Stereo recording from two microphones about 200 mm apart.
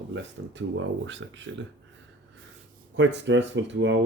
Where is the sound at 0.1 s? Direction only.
65° right (ahead or behind).